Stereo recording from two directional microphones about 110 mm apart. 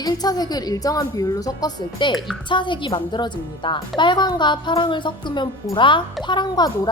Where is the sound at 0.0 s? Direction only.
35° left (ahead or behind).